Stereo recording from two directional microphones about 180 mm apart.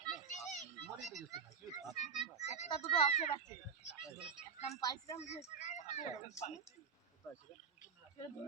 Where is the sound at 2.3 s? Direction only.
40° left (ahead or behind).